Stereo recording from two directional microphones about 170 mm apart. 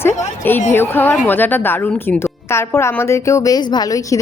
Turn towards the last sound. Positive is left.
turn(degrees=20)  # may be behind; listen again after turning